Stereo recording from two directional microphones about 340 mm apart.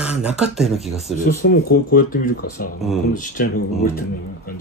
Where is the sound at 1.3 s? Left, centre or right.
Left.